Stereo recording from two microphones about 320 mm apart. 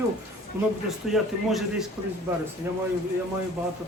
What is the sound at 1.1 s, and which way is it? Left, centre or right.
Speech, centre.